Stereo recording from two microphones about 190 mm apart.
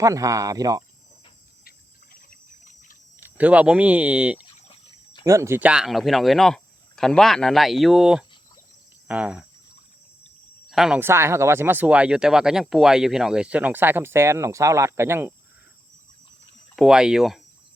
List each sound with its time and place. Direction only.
0.0 s speech: 15° right (ahead or behind)
2.1 s a sound: 45° left (ahead or behind)
3.2 s speech: 10° right (ahead or behind)
10.7 s speech: centre (ahead or behind)
16.7 s speech: 5° right (ahead or behind)